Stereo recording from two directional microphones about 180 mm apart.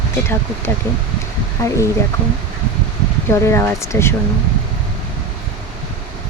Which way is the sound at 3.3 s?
15° left (ahead or behind).